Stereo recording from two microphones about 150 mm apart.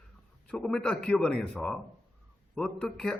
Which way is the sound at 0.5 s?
5° left (ahead or behind).